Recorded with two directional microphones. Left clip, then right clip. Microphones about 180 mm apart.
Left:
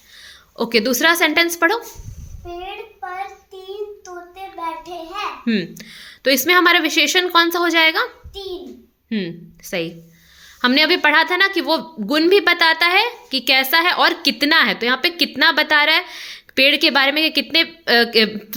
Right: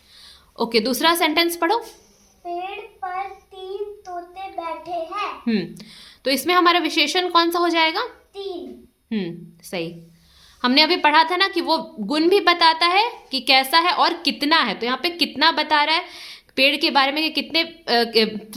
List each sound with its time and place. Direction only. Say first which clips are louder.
0.2 s a woman's voice: left 1 dB; 15° left (ahead or behind)
5.5 s a woman's voice: left 3 dB; 10° left (ahead or behind)